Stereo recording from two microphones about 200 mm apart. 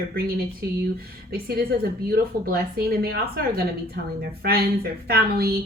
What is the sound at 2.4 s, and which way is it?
A woman's voice, 50° right (ahead or behind).